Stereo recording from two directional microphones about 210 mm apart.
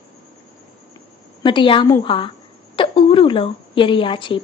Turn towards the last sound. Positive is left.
turn(degrees=25)  # may be behind; listen again after turning